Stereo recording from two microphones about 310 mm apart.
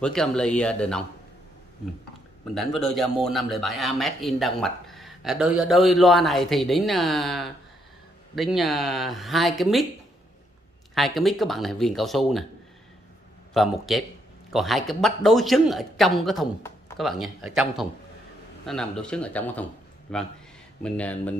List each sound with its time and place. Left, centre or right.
0.0 s speech: centre
2.5 s speech: centre
11.0 s speech: centre
13.5 s a man's voice: centre